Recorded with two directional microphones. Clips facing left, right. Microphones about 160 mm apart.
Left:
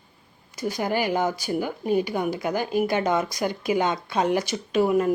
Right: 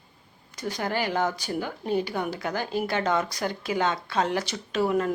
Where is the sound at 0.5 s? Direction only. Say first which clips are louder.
Left 3 dB; 10° left (ahead or behind).